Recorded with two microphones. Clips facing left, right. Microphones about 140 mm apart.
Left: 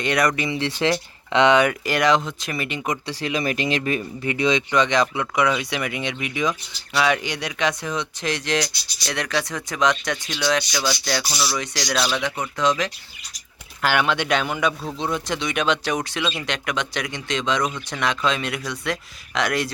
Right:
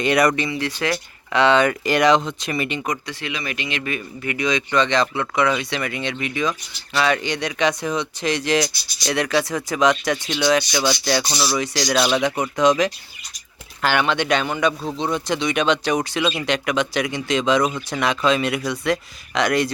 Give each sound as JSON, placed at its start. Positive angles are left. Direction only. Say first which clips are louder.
{"t": 0.0, "sound": "a man's voice", "louder": "right 4 dB", "side_deg": -5}
{"t": 0.5, "sound": "a man's voice", "louder": "left 2 dB", "side_deg": 25}
{"t": 3.1, "sound": "a man's voice", "louder": "left 5 dB", "side_deg": 35}
{"t": 10.7, "sound": "speech", "louder": "right 4 dB", "side_deg": -20}
{"t": 11.5, "sound": "a man's voice", "louder": "right 7 dB", "side_deg": -5}
{"t": 12.2, "sound": "speech", "louder": "right 5 dB", "side_deg": -15}
{"t": 13.8, "sound": "a man's voice", "louder": "right 1 dB", "side_deg": 5}